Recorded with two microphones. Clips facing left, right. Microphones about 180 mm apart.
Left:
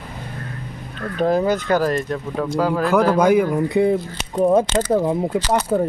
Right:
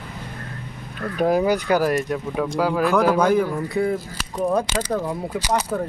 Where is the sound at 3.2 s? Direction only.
10° left (ahead or behind).